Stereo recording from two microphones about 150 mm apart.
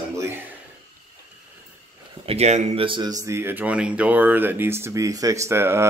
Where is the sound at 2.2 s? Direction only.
45° right (ahead or behind).